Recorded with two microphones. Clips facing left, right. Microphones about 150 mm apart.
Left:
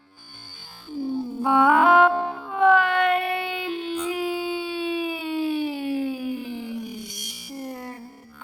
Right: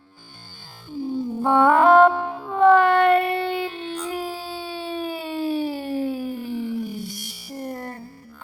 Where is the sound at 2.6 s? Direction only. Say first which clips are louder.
Right 4 dB; 35° right (ahead or behind).